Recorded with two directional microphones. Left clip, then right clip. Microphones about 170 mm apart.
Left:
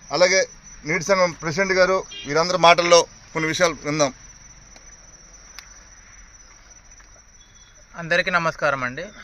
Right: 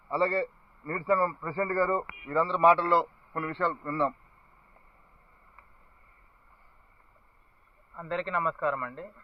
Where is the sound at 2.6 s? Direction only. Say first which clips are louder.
Left 8 dB; 60° left (ahead or behind).